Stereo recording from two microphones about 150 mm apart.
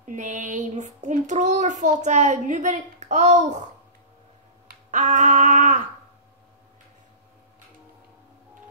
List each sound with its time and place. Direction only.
0.0 s child singing: 55° right (ahead or behind)
4.9 s child singing: 55° right (ahead or behind)